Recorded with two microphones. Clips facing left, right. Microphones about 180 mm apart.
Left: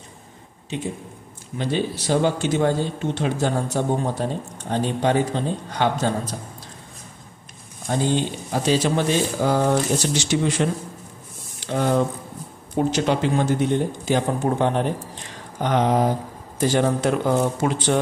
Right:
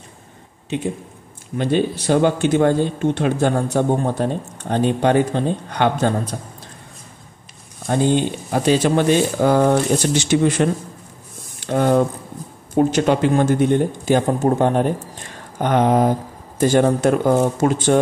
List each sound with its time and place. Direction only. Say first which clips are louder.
1.6 s speech: right 5 dB; 55° right (ahead or behind)
7.8 s a man's voice: right 5 dB; 60° right (ahead or behind)